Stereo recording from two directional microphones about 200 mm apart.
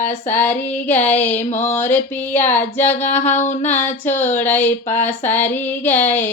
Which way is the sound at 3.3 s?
35° left (ahead or behind).